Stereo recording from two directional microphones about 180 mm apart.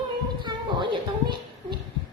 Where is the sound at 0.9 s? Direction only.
25° right (ahead or behind).